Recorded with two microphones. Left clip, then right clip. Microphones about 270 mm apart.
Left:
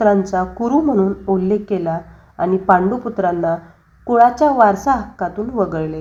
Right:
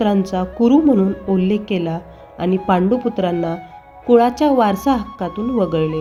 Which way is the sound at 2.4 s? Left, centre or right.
Right.